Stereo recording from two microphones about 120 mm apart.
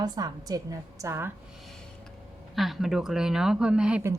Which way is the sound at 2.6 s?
Centre (ahead or behind).